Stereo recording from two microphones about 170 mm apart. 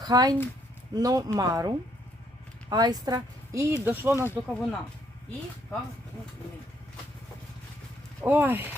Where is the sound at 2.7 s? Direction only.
25° right (ahead or behind).